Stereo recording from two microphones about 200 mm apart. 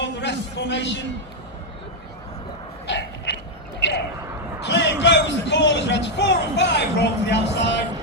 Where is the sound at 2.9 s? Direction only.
60° left (ahead or behind).